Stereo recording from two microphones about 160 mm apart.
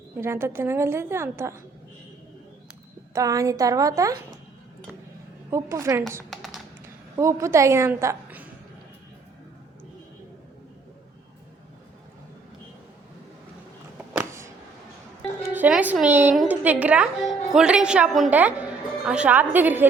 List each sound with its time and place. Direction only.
0.2 s a woman's voice: 15° right (ahead or behind)
3.1 s a woman's voice: 20° right (ahead or behind)
5.5 s a woman's voice: 15° right (ahead or behind)
6.3 s tap: centre (ahead or behind)
6.8 s a woman's voice: 20° right (ahead or behind)
14.1 s a sound: 15° right (ahead or behind)
15.5 s a woman's voice: 10° right (ahead or behind)